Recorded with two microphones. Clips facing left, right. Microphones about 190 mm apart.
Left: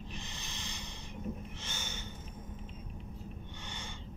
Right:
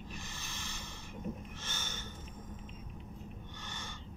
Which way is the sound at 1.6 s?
15° left (ahead or behind).